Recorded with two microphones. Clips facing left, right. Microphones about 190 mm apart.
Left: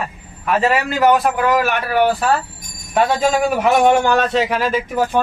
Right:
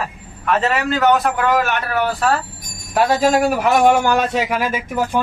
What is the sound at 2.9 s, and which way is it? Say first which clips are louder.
A man's voice: right 1 dB; 5° right (ahead or behind).